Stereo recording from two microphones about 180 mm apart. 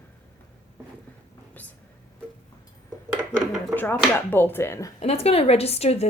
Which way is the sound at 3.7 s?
5° left (ahead or behind).